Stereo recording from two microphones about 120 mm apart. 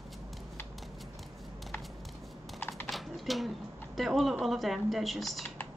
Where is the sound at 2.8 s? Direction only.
Centre (ahead or behind).